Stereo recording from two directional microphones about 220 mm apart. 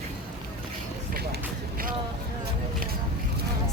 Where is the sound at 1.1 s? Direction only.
40° right (ahead or behind).